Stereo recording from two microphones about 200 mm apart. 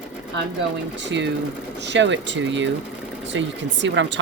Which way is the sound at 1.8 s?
60° right (ahead or behind).